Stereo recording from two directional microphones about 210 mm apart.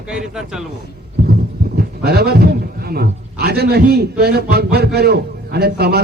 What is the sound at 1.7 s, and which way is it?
A man's voice, 50° right (ahead or behind).